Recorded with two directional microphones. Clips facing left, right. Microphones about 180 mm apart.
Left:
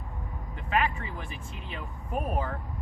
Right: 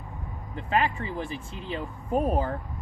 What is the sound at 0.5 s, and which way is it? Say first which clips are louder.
Speech: right 2 dB; 30° right (ahead or behind).